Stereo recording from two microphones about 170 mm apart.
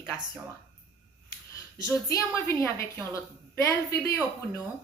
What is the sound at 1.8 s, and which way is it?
A woman's voice, 20° left (ahead or behind).